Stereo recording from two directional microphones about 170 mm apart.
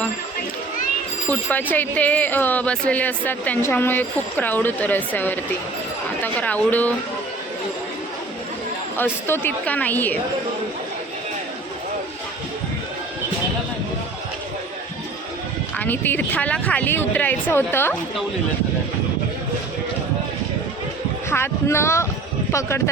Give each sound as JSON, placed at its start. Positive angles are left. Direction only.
{"t": 1.3, "sound": "speech", "side_deg": 10}
{"t": 9.0, "sound": "speech", "side_deg": 15}
{"t": 15.8, "sound": "speech", "side_deg": 10}
{"t": 21.2, "sound": "speech", "side_deg": 15}